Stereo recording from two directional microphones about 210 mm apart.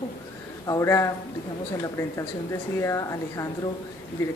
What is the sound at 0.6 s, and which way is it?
Speech, 15° left (ahead or behind).